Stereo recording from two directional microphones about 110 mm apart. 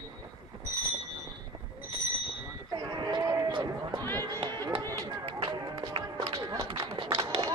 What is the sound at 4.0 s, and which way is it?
Run, 20° left (ahead or behind).